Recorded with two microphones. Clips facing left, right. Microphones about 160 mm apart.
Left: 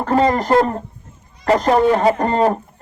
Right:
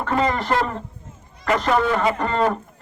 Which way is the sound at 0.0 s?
35° left (ahead or behind).